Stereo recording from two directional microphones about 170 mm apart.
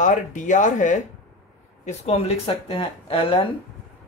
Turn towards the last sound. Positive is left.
turn(degrees=35)  # may be behind; listen again after turning